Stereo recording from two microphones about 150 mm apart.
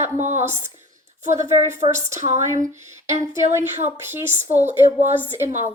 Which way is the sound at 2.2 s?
50° right (ahead or behind).